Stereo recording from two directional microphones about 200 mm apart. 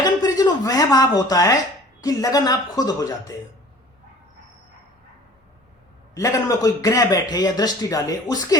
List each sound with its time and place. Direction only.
0.0 s a sound: 20° left (ahead or behind)
2.0 s a man's voice: 15° left (ahead or behind)
6.1 s a man's voice: 15° left (ahead or behind)